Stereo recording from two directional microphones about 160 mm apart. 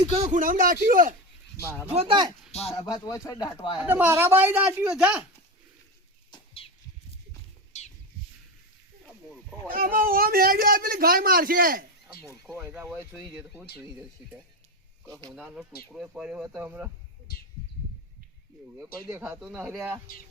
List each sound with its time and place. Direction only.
0.3 s speech: 55° right (ahead or behind)
1.9 s speech: 35° right (ahead or behind)
2.5 s speech: 40° left (ahead or behind)
2.8 s speech: 25° left (ahead or behind)
3.8 s speech: 10° right (ahead or behind)
6.3 s a sound: 35° left (ahead or behind)
7.7 s a sound: 45° left (ahead or behind)
9.7 s speech: 60° right (ahead or behind)
12.6 s speech: 15° right (ahead or behind)
17.3 s heart murmur: 75° left (ahead or behind)
19.1 s speech: 5° right (ahead or behind)